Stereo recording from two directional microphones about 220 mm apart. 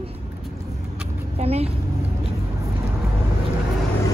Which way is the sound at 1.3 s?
25° right (ahead or behind).